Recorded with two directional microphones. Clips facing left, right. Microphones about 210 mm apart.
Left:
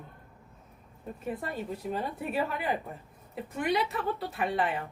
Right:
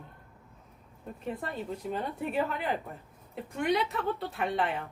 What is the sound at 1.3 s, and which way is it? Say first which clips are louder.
Speech: left 1 dB; 5° left (ahead or behind).